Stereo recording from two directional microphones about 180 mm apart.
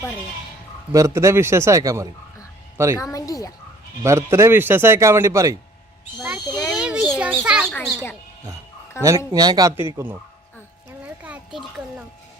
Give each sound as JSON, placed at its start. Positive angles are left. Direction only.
{"t": 0.9, "sound": "a man's voice", "side_deg": -15}
{"t": 3.0, "sound": "speech", "side_deg": 20}
{"t": 4.0, "sound": "a man's voice", "side_deg": -15}
{"t": 6.6, "sound": "a sound", "side_deg": 5}
{"t": 6.8, "sound": "a child's voice", "side_deg": -5}
{"t": 9.0, "sound": "speech", "side_deg": -20}
{"t": 11.2, "sound": "a child's voice", "side_deg": -5}